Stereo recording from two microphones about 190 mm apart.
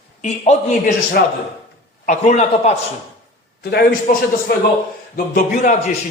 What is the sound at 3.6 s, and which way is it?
A man's voice, 55° left (ahead or behind).